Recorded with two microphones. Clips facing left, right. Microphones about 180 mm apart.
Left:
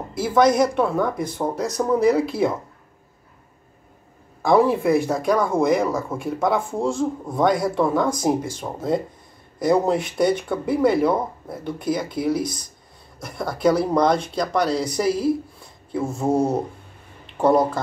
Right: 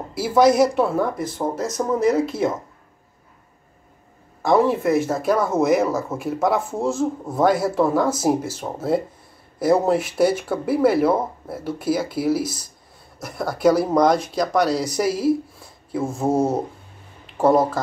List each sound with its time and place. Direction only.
0.1 s speech: 5° right (ahead or behind)
4.4 s speech: centre (ahead or behind)
14.7 s speech: 25° left (ahead or behind)
15.0 s speech: 5° right (ahead or behind)
16.0 s speech: 25° right (ahead or behind)
17.4 s speech: 5° right (ahead or behind)